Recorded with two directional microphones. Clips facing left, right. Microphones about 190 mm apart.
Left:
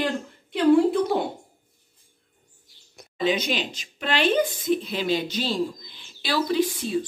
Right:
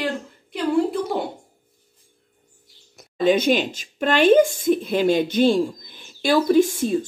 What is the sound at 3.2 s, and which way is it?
A woman's voice, 50° right (ahead or behind).